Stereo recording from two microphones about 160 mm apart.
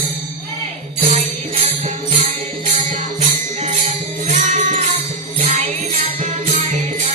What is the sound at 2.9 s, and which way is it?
Music, 45° right (ahead or behind).